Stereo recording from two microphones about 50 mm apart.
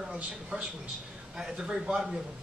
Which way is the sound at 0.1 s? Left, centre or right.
Centre.